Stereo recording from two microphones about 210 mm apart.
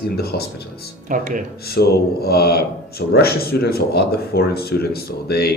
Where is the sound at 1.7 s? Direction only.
50° left (ahead or behind).